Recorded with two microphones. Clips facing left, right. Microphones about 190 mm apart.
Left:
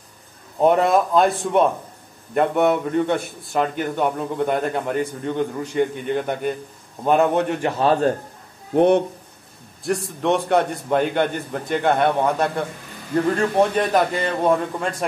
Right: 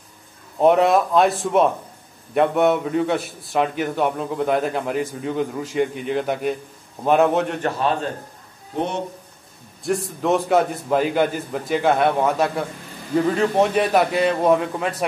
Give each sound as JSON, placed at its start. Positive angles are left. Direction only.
{"t": 0.6, "sound": "a man's voice", "side_deg": 0}
{"t": 8.7, "sound": "speech", "side_deg": 60}
{"t": 9.8, "sound": "a man's voice", "side_deg": 0}